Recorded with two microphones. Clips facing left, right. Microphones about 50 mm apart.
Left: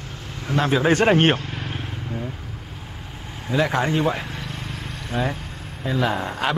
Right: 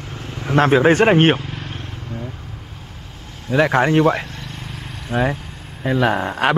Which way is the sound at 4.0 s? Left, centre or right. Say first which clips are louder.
Right 7 dB; right.